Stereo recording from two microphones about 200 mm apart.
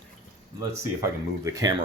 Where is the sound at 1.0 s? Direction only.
15° right (ahead or behind).